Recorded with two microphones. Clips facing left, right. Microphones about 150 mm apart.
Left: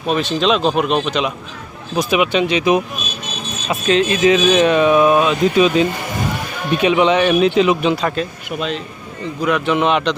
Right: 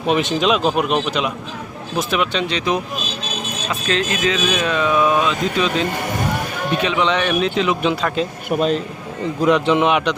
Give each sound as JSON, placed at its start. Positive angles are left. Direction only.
{"t": 0.1, "sound": "speech", "side_deg": -20}
{"t": 0.4, "sound": "speech", "side_deg": -5}
{"t": 8.4, "sound": "a man's voice", "side_deg": -45}
{"t": 9.4, "sound": "speech", "side_deg": -25}
{"t": 9.9, "sound": "speech", "side_deg": -10}